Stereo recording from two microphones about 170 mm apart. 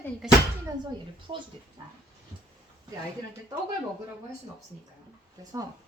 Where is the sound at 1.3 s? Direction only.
30° right (ahead or behind).